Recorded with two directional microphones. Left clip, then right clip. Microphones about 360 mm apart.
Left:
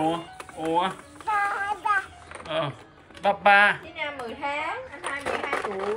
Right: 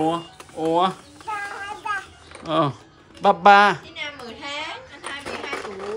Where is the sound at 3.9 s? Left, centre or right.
Centre.